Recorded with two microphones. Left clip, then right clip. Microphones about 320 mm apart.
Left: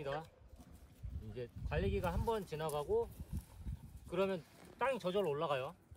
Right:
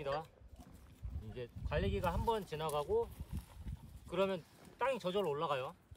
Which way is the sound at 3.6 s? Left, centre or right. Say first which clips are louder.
Right 1 dB; centre.